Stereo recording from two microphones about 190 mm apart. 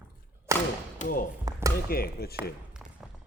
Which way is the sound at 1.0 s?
45° left (ahead or behind).